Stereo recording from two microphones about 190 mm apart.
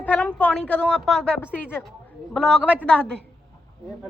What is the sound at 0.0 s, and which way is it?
A woman's voice, 10° left (ahead or behind).